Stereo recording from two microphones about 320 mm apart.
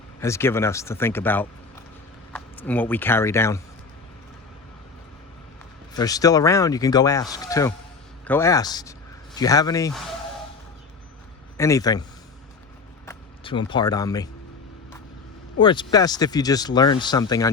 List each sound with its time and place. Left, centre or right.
0.2 s speech: centre
5.9 s speech: centre
11.5 s speech: centre
13.1 s speech: centre
15.6 s speech: centre